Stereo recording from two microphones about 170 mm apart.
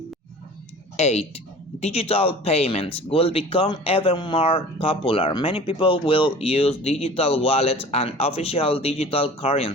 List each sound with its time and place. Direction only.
0.9 s speech: 40° left (ahead or behind)